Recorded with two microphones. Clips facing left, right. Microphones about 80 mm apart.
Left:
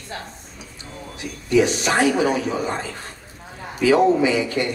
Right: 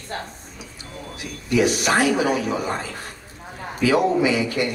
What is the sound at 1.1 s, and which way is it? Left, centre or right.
Speech, left.